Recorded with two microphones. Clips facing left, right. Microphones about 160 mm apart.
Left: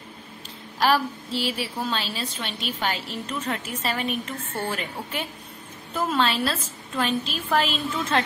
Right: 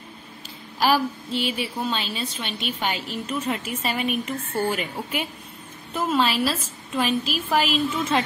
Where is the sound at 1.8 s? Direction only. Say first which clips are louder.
Right 1 dB; centre (ahead or behind).